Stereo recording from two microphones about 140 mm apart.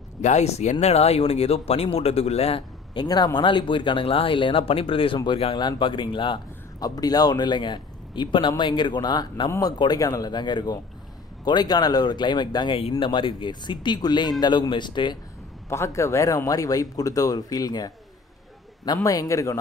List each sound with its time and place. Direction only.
0.2 s speech: 55° left (ahead or behind); by 15.1 s 35° left (ahead or behind)
15.7 s speech: 20° left (ahead or behind)
19.0 s speech: 25° left (ahead or behind)